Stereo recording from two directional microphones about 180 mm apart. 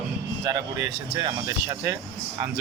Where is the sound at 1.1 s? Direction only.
20° right (ahead or behind).